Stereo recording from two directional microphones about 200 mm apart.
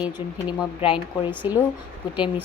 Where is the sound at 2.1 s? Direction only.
5° right (ahead or behind).